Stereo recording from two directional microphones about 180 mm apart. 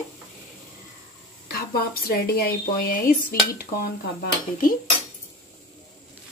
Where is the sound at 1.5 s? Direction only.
60° left (ahead or behind).